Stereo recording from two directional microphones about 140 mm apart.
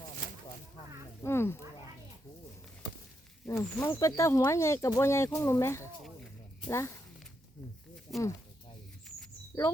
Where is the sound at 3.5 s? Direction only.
20° left (ahead or behind).